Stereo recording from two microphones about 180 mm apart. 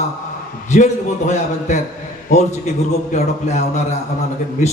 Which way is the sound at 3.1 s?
40° left (ahead or behind).